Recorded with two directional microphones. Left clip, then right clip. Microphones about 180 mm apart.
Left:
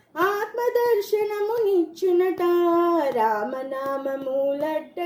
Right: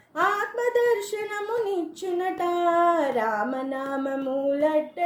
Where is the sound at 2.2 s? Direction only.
35° left (ahead or behind).